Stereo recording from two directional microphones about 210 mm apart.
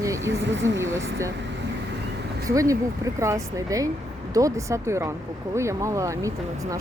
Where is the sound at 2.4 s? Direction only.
15° right (ahead or behind).